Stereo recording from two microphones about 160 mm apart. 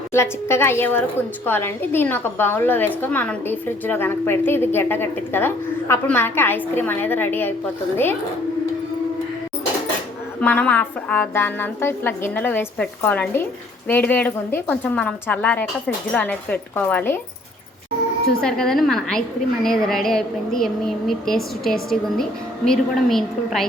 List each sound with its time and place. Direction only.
0.1 s a woman's voice: 15° left (ahead or behind)
10.4 s a woman's voice: 10° left (ahead or behind)
18.3 s a woman's voice: 5° left (ahead or behind)